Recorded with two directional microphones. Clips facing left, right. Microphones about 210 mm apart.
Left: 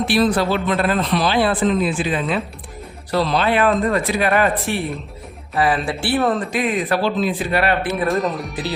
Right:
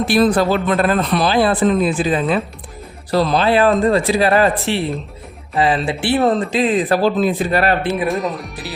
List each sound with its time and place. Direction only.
0.1 s speech: 45° right (ahead or behind)
8.0 s speech: centre (ahead or behind)